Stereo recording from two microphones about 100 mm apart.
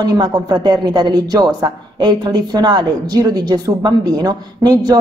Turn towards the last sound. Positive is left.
turn(degrees=-45)  # may be behind; listen again after turning